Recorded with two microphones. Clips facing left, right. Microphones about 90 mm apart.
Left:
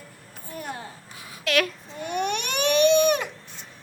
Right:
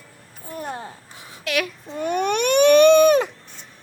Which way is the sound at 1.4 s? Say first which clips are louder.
Left 1 dB; 10° right (ahead or behind).